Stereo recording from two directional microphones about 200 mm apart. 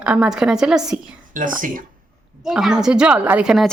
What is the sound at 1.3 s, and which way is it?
Speech, 40° right (ahead or behind).